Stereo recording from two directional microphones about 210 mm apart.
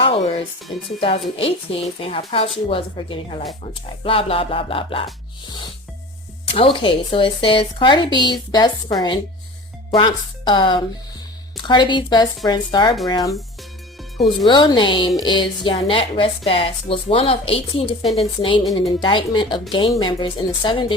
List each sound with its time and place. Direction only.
0.0 s music: 30° left (ahead or behind)
0.9 s a woman's voice: 25° left (ahead or behind)
6.5 s a woman's voice: 25° left (ahead or behind)
14.4 s a woman's voice: 20° left (ahead or behind)